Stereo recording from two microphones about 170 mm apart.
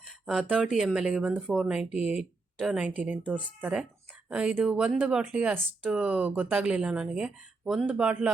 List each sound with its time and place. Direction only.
0.3 s speech: 5° right (ahead or behind)